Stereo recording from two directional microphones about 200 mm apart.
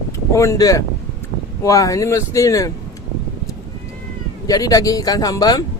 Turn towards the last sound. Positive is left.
turn(degrees=20)  # may be behind; listen again after turning